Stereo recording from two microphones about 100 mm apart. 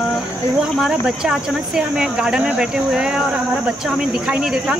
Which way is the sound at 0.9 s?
5° right (ahead or behind).